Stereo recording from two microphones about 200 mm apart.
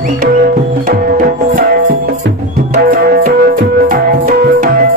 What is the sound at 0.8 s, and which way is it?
Music, 45° right (ahead or behind).